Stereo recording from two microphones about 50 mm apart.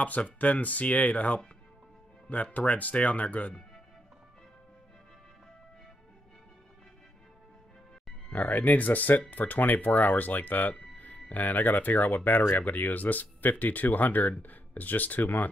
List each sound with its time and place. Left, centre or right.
0.0 s speech: left
8.3 s speech: left